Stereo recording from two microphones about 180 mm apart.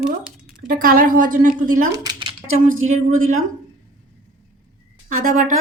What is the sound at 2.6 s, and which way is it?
Speech, 90° right.